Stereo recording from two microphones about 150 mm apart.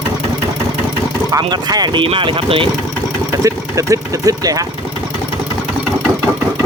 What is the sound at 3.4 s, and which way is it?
Speech, 20° right (ahead or behind).